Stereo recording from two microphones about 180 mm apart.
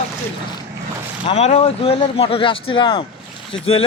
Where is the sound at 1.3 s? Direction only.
35° left (ahead or behind).